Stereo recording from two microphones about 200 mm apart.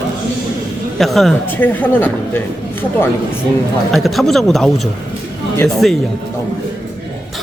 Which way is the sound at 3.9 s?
Centre (ahead or behind).